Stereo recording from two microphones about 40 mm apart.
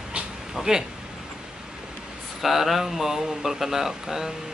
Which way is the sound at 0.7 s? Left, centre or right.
Centre.